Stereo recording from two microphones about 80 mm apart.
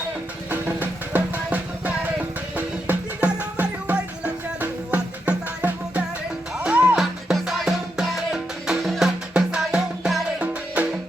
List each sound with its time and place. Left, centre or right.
0.5 s music: right
7.0 s music: centre